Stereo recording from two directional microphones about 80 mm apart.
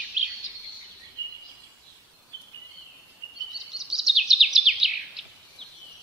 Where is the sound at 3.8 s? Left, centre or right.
Centre.